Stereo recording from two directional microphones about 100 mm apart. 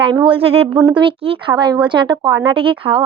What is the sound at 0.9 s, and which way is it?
A child's voice, 65° right (ahead or behind).